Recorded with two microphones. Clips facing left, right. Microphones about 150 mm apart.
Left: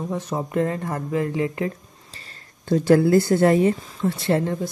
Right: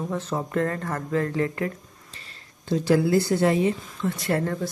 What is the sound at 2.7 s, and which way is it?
A woman's voice, 50° left (ahead or behind).